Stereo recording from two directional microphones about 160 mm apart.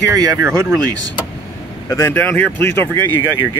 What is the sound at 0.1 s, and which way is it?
Speech, 20° right (ahead or behind).